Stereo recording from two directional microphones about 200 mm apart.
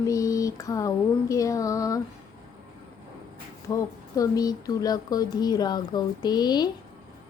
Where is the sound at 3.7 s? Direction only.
15° left (ahead or behind).